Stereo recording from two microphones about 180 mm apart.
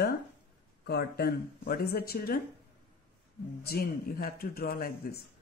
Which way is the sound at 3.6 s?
55° left (ahead or behind).